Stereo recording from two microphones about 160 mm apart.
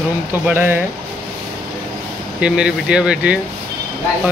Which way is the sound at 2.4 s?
5° right (ahead or behind).